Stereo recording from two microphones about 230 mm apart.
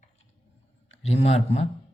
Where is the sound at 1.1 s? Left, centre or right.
Left.